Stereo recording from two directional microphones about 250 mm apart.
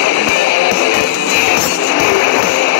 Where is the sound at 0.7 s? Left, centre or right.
Left.